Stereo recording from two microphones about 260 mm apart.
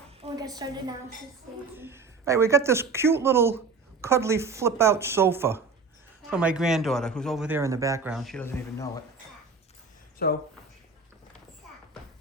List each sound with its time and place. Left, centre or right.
0.2 s a woman's voice: centre
10.2 s speech: left